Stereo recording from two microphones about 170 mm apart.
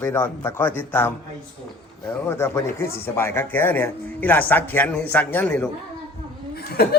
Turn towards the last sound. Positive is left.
turn(degrees=70)  # may be behind; listen again after turning